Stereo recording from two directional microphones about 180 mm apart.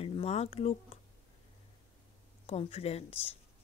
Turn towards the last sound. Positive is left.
turn(degrees=35)  # may be behind; listen again after turning